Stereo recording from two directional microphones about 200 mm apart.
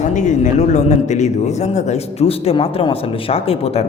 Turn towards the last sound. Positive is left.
turn(degrees=30)  # may be behind; listen again after turning